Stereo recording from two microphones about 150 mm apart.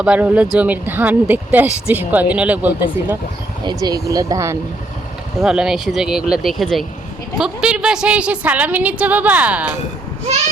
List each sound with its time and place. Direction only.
0.0 s speech: 10° right (ahead or behind)
3.6 s speech: 30° right (ahead or behind)
5.4 s speech: 5° right (ahead or behind)